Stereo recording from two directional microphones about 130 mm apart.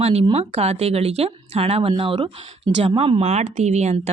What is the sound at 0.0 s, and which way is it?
Speech, 50° right (ahead or behind).